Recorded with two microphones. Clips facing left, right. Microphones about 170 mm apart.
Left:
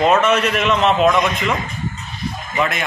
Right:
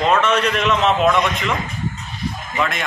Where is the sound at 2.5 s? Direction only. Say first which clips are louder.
Left 2 dB; 5° left (ahead or behind).